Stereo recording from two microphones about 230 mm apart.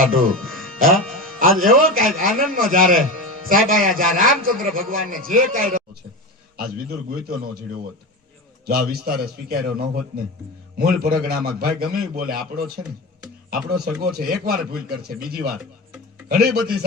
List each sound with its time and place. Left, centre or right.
0.8 s a man's voice: right
8.6 s a man's voice: right